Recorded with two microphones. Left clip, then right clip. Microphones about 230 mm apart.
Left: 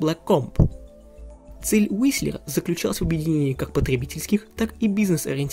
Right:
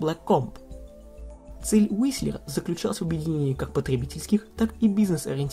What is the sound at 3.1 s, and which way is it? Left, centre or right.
Speech, left.